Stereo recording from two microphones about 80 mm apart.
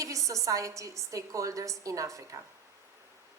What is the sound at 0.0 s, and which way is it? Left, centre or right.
A woman's voice, right.